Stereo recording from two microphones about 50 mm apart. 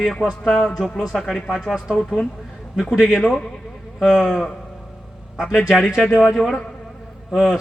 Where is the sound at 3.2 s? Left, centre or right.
Centre.